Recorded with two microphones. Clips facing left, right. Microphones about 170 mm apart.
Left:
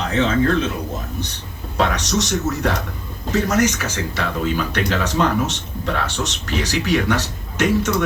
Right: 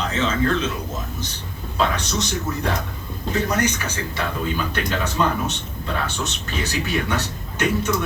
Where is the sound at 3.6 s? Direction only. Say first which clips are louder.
Left 4 dB; 90° left.